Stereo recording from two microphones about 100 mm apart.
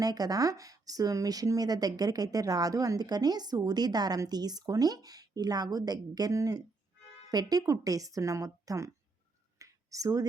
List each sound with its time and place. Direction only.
0.0 s speech: 40° right (ahead or behind)
9.6 s whispering: 35° right (ahead or behind)